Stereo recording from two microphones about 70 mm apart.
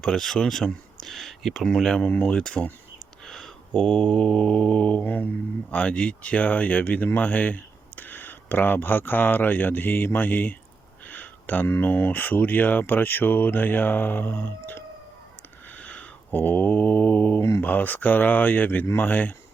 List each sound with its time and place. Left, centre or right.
0.0 s speech: centre
2.0 s speech: centre
3.2 s a sound: centre
3.8 s speech: centre; by 14.8 s left
15.8 s mantra: centre
17.6 s speech: left